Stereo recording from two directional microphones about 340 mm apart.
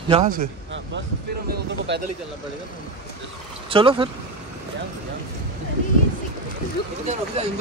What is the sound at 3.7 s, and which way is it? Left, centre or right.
Speech, centre.